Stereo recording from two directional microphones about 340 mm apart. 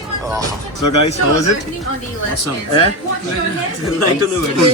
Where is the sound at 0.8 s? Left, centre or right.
Left.